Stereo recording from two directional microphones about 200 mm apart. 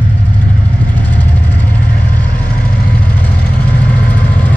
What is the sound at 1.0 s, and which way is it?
Vehicle, 10° left (ahead or behind).